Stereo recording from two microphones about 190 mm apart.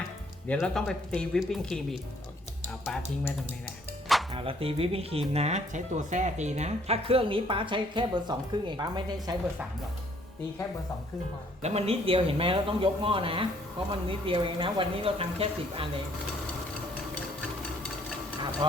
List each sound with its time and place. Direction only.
0.4 s speech: 5° left (ahead or behind)
4.4 s speech: 30° right (ahead or behind)
11.6 s speech: 35° right (ahead or behind)